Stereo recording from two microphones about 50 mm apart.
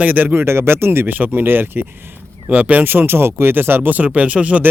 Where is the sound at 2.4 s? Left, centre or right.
Right.